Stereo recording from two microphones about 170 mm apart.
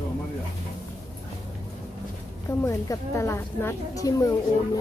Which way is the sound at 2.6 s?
15° left (ahead or behind).